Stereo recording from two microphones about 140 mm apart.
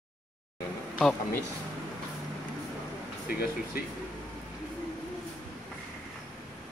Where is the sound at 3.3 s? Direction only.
90° left.